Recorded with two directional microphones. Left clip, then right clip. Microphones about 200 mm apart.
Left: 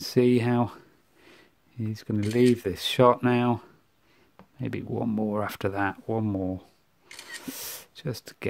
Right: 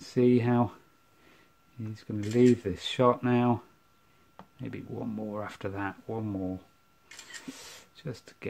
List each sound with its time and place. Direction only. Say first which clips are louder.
0.0 s speech: left 3 dB; 50° left (ahead or behind)
1.3 s a sound: left 7 dB; 55° left (ahead or behind)
2.3 s speech: left 1 dB; 50° left (ahead or behind)